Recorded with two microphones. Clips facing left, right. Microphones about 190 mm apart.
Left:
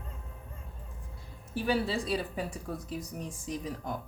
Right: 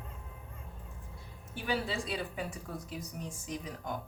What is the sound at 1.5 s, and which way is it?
Speech, 40° left (ahead or behind).